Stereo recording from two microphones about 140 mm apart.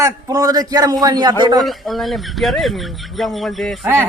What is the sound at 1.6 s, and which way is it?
Speech, centre (ahead or behind).